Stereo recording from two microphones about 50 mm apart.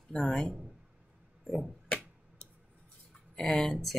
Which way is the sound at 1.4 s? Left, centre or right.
Centre.